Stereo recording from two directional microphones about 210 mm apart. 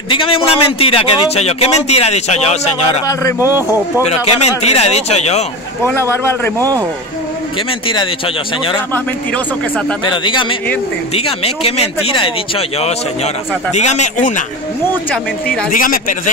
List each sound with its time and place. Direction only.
0.1 s speech: 25° left (ahead or behind)
3.3 s a man's voice: 10° right (ahead or behind)
4.1 s speech: 30° left (ahead or behind)
5.9 s a man's voice: 10° left (ahead or behind)
8.9 s speech: 5° left (ahead or behind)
10.0 s speech: 20° left (ahead or behind)
15.0 s speech: 5° left (ahead or behind)
15.7 s speech: 40° left (ahead or behind)